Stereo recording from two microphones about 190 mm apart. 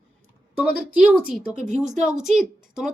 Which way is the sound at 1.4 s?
40° right (ahead or behind).